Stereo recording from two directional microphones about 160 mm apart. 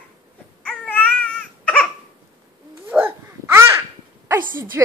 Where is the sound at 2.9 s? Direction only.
15° right (ahead or behind).